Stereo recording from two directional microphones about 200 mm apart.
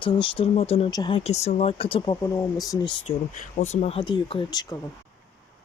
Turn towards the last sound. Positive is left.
turn(degrees=20)  # may be behind; listen again after turning